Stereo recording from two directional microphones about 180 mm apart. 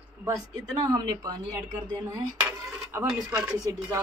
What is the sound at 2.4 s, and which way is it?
Cutlery, 5° right (ahead or behind).